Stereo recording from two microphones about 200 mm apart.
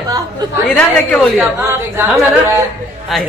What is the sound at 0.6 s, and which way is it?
Speech, 5° left (ahead or behind).